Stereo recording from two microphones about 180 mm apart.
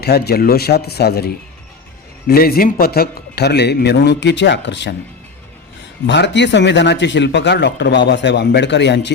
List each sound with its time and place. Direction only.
0.0 s speech: 60° left (ahead or behind); by 4.9 s 80° left
6.1 s speech: 75° left (ahead or behind)